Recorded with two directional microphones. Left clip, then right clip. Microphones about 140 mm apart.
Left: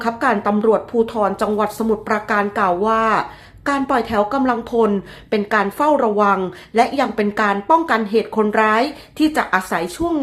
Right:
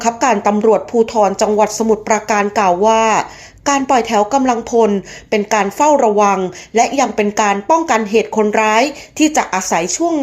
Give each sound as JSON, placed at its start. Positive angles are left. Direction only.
{"t": 0.0, "sound": "speech", "side_deg": -20}